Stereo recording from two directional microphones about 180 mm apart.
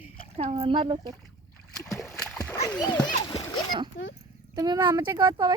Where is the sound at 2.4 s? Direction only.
10° left (ahead or behind).